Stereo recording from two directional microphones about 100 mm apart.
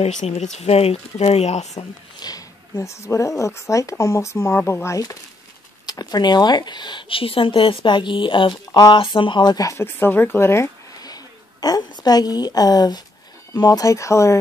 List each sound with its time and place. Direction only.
0.3 s speech: 90° left
2.1 s speech: 40° left (ahead or behind)
9.7 s speech: 25° left (ahead or behind)
11.0 s a woman's voice: 40° left (ahead or behind)